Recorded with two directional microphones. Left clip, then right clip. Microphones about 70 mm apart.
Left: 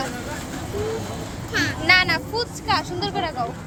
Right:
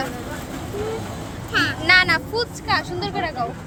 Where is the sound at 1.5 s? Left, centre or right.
Right.